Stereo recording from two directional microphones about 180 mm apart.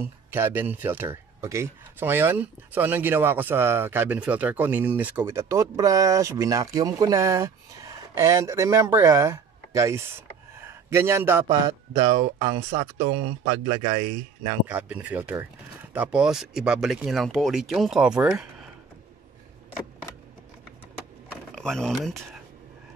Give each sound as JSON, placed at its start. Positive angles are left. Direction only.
{"t": 0.0, "sound": "speech", "side_deg": -10}
{"t": 11.4, "sound": "a man's voice", "side_deg": -30}
{"t": 14.7, "sound": "speech", "side_deg": -10}
{"t": 21.5, "sound": "speech", "side_deg": 5}